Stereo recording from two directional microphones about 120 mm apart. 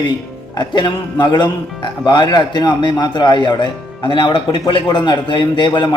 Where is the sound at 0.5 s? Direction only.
35° left (ahead or behind).